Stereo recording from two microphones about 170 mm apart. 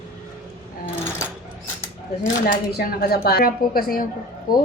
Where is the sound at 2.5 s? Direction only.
60° left (ahead or behind).